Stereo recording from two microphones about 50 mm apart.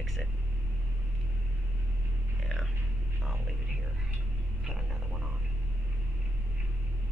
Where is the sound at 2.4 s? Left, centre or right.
Centre.